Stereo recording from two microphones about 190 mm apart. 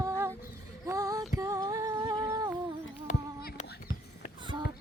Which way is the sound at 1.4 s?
15° right (ahead or behind).